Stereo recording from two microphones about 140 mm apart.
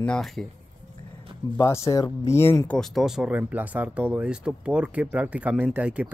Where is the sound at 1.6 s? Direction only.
20° left (ahead or behind).